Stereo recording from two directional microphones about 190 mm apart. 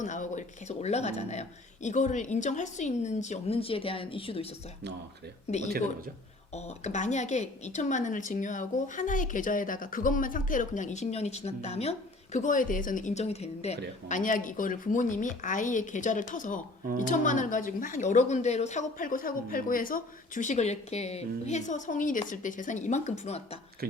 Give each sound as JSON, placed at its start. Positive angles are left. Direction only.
{"t": 0.0, "sound": "a woman's voice", "side_deg": 40}